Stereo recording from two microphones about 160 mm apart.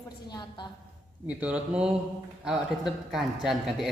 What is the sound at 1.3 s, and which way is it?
A man's voice, 10° right (ahead or behind).